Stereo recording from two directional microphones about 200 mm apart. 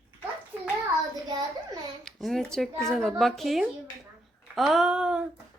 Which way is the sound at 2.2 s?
5° left (ahead or behind).